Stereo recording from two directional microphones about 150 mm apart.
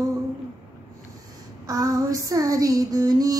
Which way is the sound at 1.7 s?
25° right (ahead or behind).